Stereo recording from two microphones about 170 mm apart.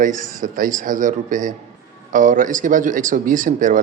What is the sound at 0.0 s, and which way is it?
Speech, 50° right (ahead or behind).